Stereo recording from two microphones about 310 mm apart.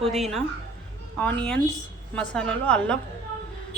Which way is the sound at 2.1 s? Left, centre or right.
Centre.